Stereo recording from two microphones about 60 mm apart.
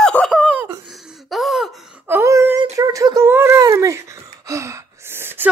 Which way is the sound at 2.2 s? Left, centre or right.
Right.